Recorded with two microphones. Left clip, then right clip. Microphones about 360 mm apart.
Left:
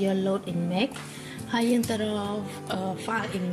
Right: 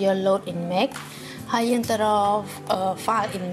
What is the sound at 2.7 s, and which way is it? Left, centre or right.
Speech, centre.